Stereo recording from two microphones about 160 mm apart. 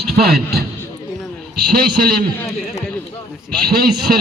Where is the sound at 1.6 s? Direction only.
70° right (ahead or behind).